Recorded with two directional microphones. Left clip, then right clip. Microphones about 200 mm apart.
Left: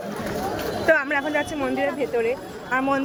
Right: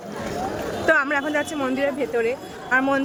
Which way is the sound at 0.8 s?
15° right (ahead or behind).